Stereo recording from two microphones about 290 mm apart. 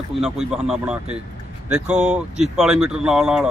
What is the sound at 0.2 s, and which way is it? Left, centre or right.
Speech, centre.